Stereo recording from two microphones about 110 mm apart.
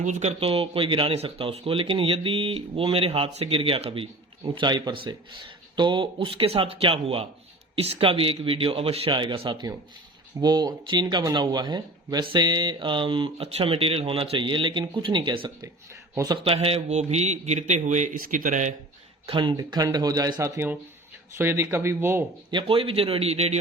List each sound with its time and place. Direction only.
0.0 s speech: 90° right; by 4.1 s 55° right (ahead or behind)
4.5 s speech: 40° right (ahead or behind)
16.4 s a man's voice: 60° right (ahead or behind); by 18.0 s 90° right
19.3 s speech: 50° right (ahead or behind)
19.5 s speech: 35° right (ahead or behind)
20.4 s speech: 20° right (ahead or behind)
22.5 s speech: 55° right (ahead or behind); by 23.6 s 75° right (ahead or behind)